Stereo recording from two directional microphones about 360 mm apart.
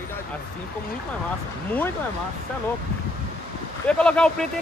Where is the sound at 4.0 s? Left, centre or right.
Centre.